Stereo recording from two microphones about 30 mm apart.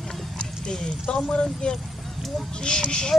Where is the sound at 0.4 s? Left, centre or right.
Left.